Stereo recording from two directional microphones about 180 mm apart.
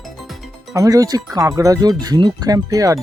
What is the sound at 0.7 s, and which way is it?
Speech, 20° right (ahead or behind).